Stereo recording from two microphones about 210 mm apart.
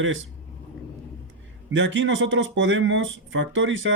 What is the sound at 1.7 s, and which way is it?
Speech, 65° right (ahead or behind).